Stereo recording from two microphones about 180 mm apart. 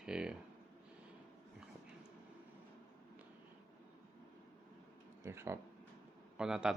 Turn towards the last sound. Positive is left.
turn(degrees=-5)  # may be behind; listen again after turning